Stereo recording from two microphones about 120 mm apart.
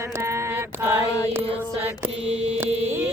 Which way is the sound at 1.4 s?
50° right (ahead or behind).